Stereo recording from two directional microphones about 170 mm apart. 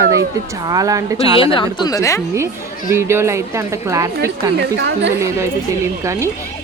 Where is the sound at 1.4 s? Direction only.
30° left (ahead or behind).